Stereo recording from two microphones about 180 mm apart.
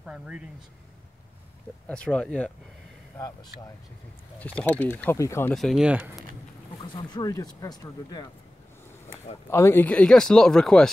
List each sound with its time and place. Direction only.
0.0 s speech: 5° right (ahead or behind)
1.9 s speech: 5° left (ahead or behind)
4.4 s speech: 10° left (ahead or behind)
5.5 s speech: centre (ahead or behind)
6.8 s speech: 20° left (ahead or behind)
9.5 s speech: 15° left (ahead or behind)